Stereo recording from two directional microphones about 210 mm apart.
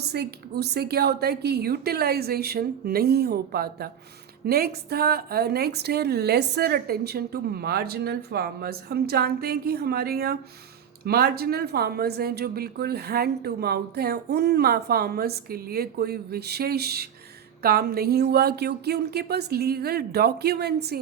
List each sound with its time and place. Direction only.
0.1 s speech: 50° right (ahead or behind)